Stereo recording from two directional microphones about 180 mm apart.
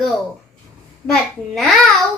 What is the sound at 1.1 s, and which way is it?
Speech, centre (ahead or behind).